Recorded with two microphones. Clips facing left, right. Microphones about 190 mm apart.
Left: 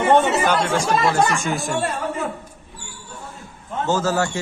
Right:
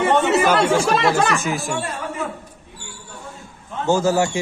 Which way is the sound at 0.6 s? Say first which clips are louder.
Right 3 dB; 85° right.